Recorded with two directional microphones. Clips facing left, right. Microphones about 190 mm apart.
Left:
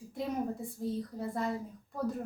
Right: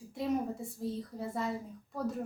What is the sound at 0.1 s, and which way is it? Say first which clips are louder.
A woman's voice: right 2 dB; centre (ahead or behind).